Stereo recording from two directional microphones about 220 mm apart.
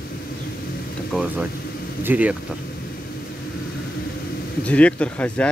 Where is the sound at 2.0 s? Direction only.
10° right (ahead or behind).